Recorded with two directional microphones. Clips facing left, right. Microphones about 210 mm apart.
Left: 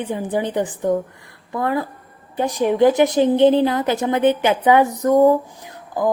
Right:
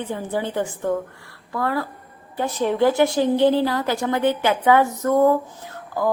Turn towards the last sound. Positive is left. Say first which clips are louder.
# left 2 dB
turn(degrees=15)  # may be behind; listen again after turning